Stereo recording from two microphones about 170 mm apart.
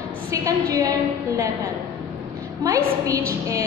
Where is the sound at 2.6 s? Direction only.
20° right (ahead or behind).